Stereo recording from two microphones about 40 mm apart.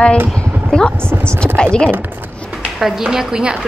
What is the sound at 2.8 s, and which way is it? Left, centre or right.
Speech, centre.